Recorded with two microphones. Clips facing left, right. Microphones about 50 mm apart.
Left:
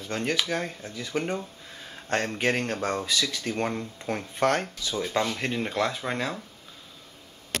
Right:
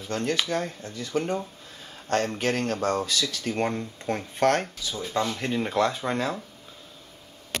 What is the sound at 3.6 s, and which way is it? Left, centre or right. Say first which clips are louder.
Speech: right 3 dB; centre.